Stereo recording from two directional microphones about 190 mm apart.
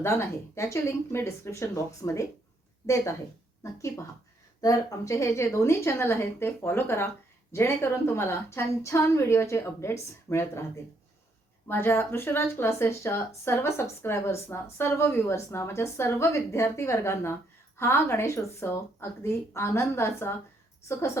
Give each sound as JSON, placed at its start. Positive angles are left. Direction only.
{"t": 0.0, "sound": "speech", "side_deg": 15}
{"t": 11.7, "sound": "speech", "side_deg": 10}